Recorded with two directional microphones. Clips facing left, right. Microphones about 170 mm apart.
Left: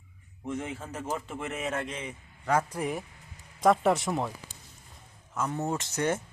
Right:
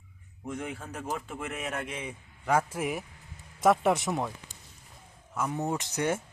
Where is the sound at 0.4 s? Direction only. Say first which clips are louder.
Left 2 dB; centre (ahead or behind).